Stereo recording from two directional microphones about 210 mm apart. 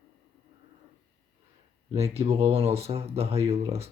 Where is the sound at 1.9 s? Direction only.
30° right (ahead or behind).